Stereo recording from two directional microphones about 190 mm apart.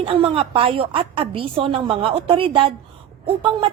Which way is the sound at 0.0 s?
30° right (ahead or behind).